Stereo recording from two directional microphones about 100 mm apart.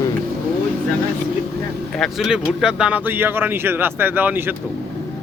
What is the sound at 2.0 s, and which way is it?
Speech, 5° right (ahead or behind).